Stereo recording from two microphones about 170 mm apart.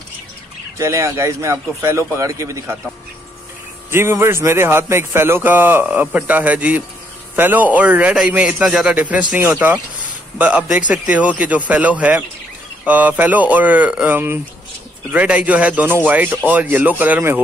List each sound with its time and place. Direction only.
0.7 s a man's voice: 20° right (ahead or behind)
3.9 s a man's voice: 15° right (ahead or behind)